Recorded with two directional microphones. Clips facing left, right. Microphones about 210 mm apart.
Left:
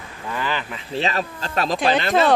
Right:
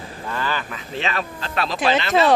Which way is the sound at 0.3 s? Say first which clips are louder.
Even; 15° left (ahead or behind).